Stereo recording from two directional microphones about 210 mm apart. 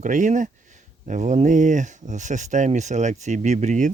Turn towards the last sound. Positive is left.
turn(degrees=-35)  # may be behind; listen again after turning